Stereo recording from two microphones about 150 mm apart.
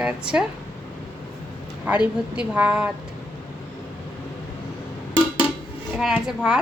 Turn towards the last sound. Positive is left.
turn(degrees=-5)  # may be behind; listen again after turning